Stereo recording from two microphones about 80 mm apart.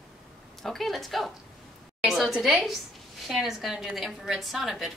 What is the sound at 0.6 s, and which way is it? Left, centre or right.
A woman's voice, centre.